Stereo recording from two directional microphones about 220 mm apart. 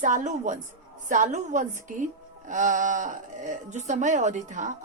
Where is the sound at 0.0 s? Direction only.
35° right (ahead or behind).